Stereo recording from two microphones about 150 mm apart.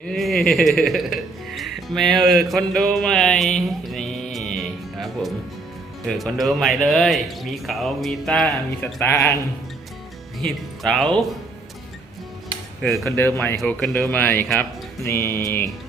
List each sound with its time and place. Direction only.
0.1 s music: centre (ahead or behind)
6.1 s speech: centre (ahead or behind)
9.0 s speech: 15° left (ahead or behind)
10.4 s speech: 5° left (ahead or behind)
13.1 s speech: 15° left (ahead or behind)
13.6 s speech: 5° left (ahead or behind)